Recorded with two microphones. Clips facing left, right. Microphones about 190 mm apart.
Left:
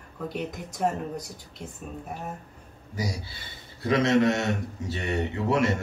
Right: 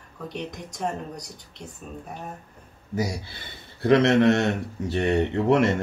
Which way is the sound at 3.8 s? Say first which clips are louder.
Right 4 dB; 65° right (ahead or behind).